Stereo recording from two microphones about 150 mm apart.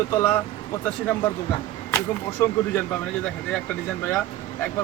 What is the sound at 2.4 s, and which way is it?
Speech, 15° left (ahead or behind).